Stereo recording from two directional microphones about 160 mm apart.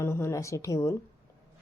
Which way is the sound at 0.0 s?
15° left (ahead or behind).